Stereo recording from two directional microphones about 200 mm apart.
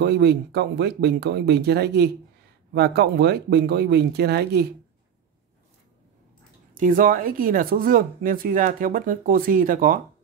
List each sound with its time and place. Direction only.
0.0 s speech: 55° right (ahead or behind)
6.7 s speech: 45° right (ahead or behind)